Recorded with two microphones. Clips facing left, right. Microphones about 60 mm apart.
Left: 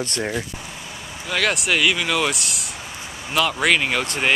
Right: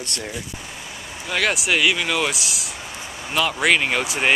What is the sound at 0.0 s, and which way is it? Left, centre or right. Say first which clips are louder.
Speech: left 6 dB; left.